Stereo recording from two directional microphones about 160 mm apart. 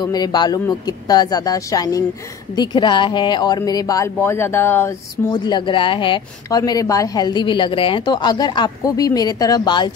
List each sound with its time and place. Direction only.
0.0 s speech: 25° left (ahead or behind)